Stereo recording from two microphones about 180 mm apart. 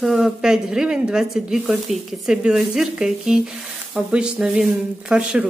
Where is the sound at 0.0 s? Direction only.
Centre (ahead or behind).